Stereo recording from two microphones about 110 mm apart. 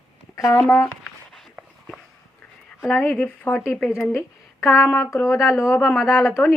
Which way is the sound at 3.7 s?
Centre (ahead or behind).